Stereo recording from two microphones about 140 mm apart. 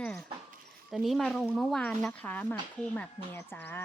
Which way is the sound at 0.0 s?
5° left (ahead or behind).